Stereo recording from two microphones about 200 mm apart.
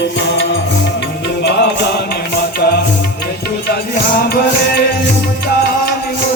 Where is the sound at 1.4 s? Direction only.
55° left (ahead or behind).